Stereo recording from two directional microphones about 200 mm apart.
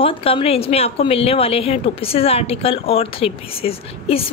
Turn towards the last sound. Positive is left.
turn(degrees=30)  # may be behind; listen again after turning